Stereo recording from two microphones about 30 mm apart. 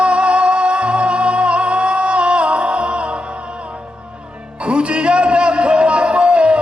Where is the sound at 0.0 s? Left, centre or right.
Right.